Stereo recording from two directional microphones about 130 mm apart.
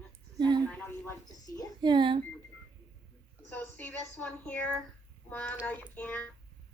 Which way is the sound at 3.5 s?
15° left (ahead or behind).